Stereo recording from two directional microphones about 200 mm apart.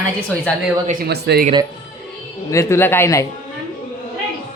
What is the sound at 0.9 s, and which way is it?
Speech, 50° right (ahead or behind).